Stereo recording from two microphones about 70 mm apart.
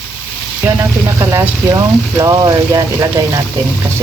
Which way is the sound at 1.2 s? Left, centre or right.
Right.